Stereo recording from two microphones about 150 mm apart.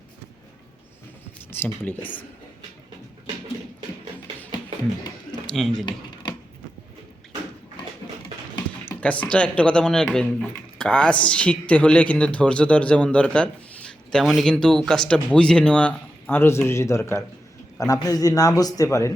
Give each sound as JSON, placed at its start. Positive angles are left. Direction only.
{"t": 1.5, "sound": "speech", "side_deg": 15}
{"t": 5.5, "sound": "speech", "side_deg": 5}
{"t": 8.8, "sound": "a man's voice", "side_deg": 10}